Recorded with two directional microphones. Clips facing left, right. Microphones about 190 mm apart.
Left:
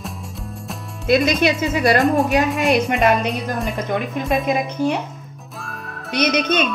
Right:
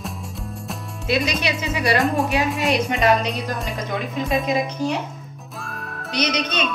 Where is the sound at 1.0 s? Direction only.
50° left (ahead or behind).